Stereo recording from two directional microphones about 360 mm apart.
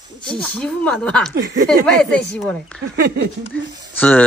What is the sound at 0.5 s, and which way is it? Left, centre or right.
Speech, centre.